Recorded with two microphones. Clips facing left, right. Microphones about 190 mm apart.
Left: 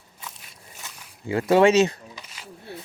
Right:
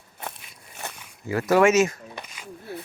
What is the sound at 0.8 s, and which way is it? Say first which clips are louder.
Zipper: right 9 dB; 60° right (ahead or behind).